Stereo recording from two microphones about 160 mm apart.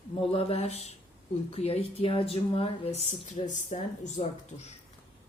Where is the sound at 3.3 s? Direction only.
50° left (ahead or behind).